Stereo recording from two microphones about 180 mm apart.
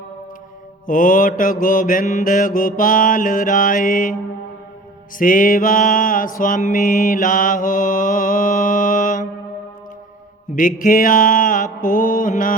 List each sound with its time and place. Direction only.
0.9 s mantra: 50° left (ahead or behind)
10.5 s mantra: 50° left (ahead or behind)